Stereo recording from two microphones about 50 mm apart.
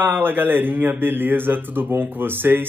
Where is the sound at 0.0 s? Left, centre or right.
Right.